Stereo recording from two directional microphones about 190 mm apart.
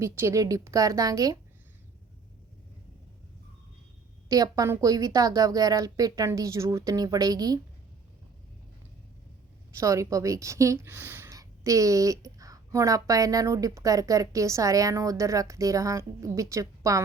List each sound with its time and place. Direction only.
0.0 s a woman's voice: 15° right (ahead or behind)
4.3 s a woman's voice: 20° right (ahead or behind)
9.7 s a woman's voice: 15° right (ahead or behind)